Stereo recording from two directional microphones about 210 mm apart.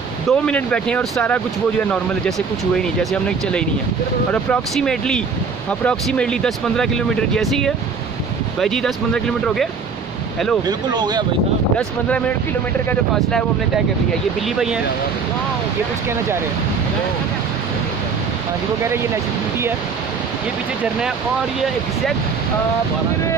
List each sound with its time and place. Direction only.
0.3 s speech: 5° left (ahead or behind)
2.8 s speech: centre (ahead or behind)
10.7 s speech: 20° right (ahead or behind)